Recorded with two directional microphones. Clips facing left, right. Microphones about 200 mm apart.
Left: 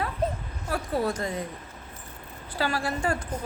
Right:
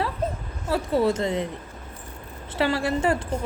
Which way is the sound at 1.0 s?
25° right (ahead or behind).